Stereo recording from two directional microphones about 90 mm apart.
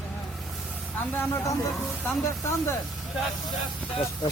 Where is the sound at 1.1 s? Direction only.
20° left (ahead or behind).